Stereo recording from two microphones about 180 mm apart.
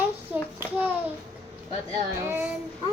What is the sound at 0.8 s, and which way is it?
Speech, 10° right (ahead or behind).